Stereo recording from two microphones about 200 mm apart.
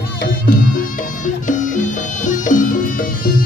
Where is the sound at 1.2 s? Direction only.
40° left (ahead or behind).